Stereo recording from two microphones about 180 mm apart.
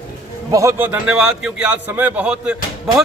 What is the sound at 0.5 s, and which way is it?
A man's voice, 15° right (ahead or behind).